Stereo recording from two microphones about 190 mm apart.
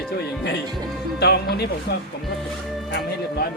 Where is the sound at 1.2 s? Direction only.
60° left (ahead or behind).